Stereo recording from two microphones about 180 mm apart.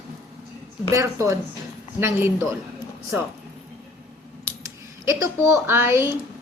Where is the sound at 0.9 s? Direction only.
15° right (ahead or behind).